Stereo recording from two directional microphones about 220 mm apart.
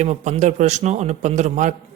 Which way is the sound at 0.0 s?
30° right (ahead or behind).